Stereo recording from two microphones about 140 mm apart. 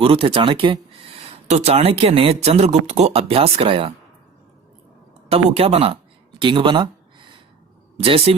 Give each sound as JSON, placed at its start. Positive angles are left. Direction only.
{"t": 0.0, "sound": "speech", "side_deg": -40}
{"t": 1.2, "sound": "speech", "side_deg": -50}
{"t": 5.3, "sound": "speech", "side_deg": -45}
{"t": 6.4, "sound": "a sound", "side_deg": -35}
{"t": 8.0, "sound": "speech", "side_deg": -45}